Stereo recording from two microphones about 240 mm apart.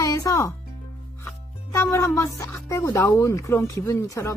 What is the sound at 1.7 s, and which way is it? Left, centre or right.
Speech, centre.